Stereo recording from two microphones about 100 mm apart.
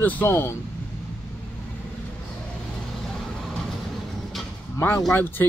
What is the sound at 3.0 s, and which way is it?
Vehicle, 5° left (ahead or behind).